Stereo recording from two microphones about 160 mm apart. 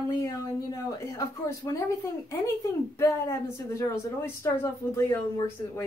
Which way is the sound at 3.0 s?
20° left (ahead or behind).